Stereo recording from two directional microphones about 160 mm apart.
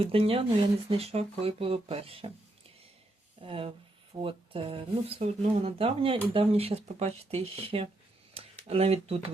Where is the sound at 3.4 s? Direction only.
35° right (ahead or behind).